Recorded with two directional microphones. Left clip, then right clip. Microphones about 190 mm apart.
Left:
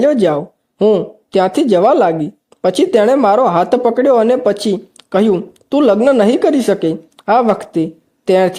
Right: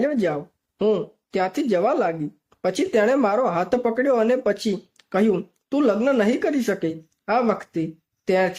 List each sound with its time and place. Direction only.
0.0 s speech: 30° left (ahead or behind)